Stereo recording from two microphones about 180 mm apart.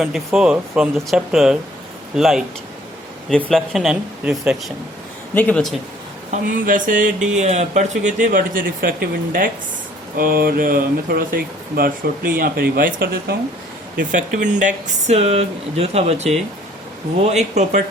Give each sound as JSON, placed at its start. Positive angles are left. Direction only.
{"t": 0.0, "sound": "speech", "side_deg": 0}
{"t": 5.3, "sound": "a man's voice", "side_deg": 10}
{"t": 6.3, "sound": "speech", "side_deg": -50}
{"t": 13.9, "sound": "speech", "side_deg": -50}